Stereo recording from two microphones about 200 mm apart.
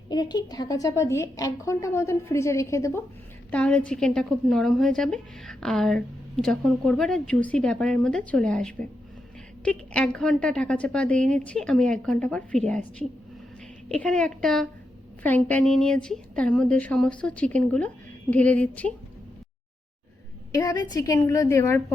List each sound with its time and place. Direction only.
0.1 s a woman's voice: 20° left (ahead or behind)
20.5 s a woman's voice: 20° left (ahead or behind)